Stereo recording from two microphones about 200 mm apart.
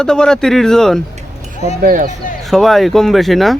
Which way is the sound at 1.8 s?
40° right (ahead or behind).